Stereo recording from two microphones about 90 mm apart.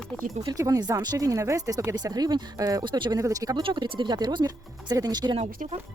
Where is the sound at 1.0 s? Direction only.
45° right (ahead or behind).